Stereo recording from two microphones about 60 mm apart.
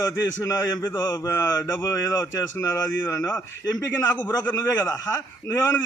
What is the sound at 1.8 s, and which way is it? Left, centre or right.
Speech, left.